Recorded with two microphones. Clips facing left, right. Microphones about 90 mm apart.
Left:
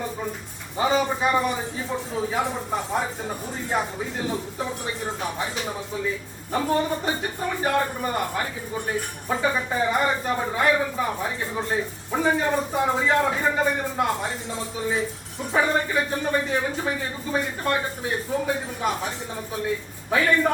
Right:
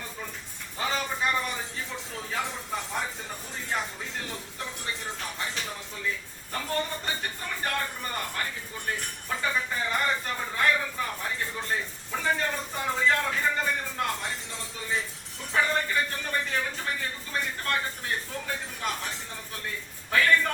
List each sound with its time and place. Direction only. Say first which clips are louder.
0.8 s a man's voice: left 8 dB; 15° left (ahead or behind)
6.5 s a man's voice: left 8 dB; 15° left (ahead or behind)
15.5 s speech: left 4 dB; 15° left (ahead or behind)